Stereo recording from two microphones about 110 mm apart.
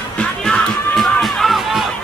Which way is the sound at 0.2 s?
5° left (ahead or behind).